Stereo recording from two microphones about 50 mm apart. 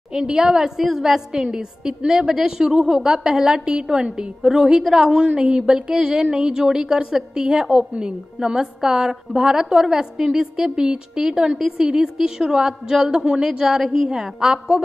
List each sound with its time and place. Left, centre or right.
0.1 s a woman's voice: centre